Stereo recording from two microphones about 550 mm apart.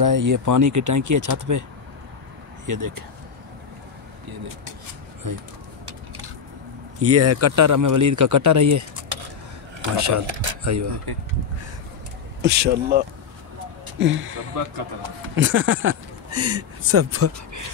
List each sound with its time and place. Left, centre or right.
0.0 s speech: right
2.6 s speech: right
5.2 s speech: right
5.9 s a sound: right
7.0 s speech: right
9.9 s speech: right
12.4 s speech: centre